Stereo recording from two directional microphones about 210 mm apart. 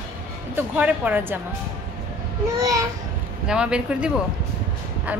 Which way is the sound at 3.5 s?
5° right (ahead or behind).